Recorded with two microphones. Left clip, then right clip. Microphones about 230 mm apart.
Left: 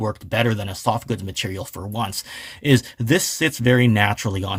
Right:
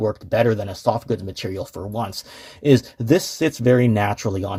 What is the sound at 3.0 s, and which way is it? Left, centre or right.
Speech, left.